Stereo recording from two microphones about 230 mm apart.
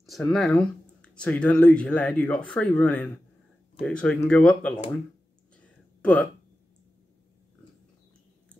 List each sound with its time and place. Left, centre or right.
0.0 s speech: centre